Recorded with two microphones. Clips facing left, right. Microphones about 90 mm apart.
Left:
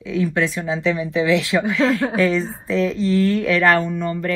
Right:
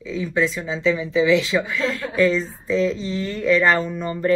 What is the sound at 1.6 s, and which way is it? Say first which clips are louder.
Speech: left 7 dB; 85° left.